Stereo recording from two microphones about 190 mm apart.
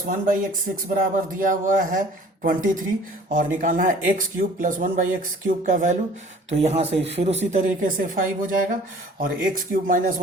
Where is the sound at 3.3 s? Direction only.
45° right (ahead or behind).